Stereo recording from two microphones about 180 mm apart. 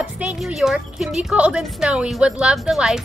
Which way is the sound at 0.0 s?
5° right (ahead or behind).